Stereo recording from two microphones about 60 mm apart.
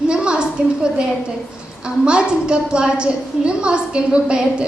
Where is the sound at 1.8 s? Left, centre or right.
Centre.